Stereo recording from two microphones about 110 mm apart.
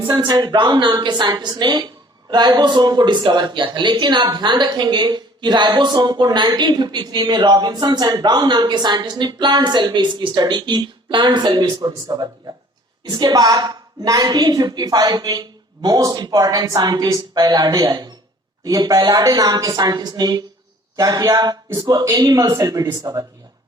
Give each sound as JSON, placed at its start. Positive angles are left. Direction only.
{"t": 0.1, "sound": "speech", "side_deg": -40}